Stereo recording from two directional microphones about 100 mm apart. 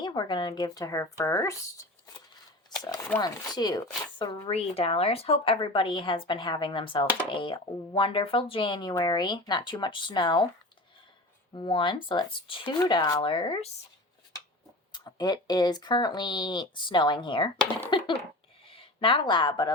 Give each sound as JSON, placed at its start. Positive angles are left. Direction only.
{"t": 0.0, "sound": "speech", "side_deg": 50}
{"t": 2.6, "sound": "a sound", "side_deg": 40}
{"t": 3.2, "sound": "speech", "side_deg": 45}
{"t": 4.5, "sound": "speech", "side_deg": 75}
{"t": 5.5, "sound": "speech", "side_deg": 55}
{"t": 11.5, "sound": "speech", "side_deg": 55}
{"t": 12.8, "sound": "speech", "side_deg": 45}
{"t": 14.9, "sound": "speech", "side_deg": 45}
{"t": 17.9, "sound": "a sound", "side_deg": 60}
{"t": 18.7, "sound": "speech", "side_deg": 65}